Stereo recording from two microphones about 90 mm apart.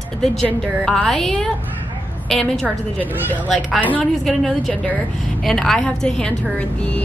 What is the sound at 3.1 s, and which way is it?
Speech, 20° right (ahead or behind).